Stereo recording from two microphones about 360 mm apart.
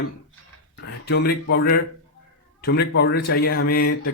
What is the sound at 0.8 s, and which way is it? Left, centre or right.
Speech, left.